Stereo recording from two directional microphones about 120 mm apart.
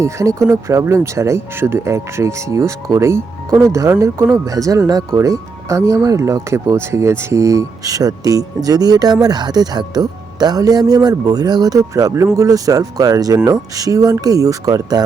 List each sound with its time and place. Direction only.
0.0 s speech: 25° right (ahead or behind)